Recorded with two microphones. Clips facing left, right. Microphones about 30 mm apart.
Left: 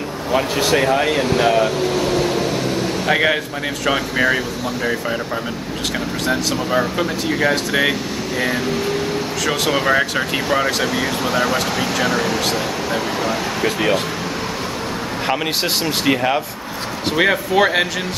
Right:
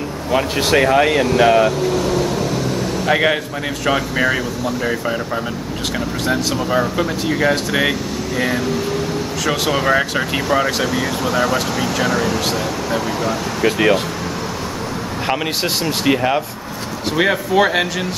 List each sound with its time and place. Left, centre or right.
0.6 s speech: centre
1.8 s vehicle: centre
3.1 s speech: centre
6.2 s speech: centre
9.5 s speech: centre
15.2 s speech: centre